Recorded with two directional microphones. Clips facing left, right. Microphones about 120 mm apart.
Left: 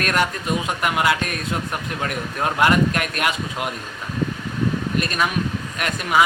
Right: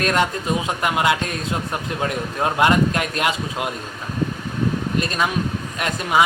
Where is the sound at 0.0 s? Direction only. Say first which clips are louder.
Right 2 dB; 25° right (ahead or behind).